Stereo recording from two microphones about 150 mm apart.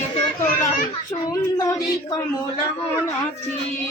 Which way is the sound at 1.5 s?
20° left (ahead or behind).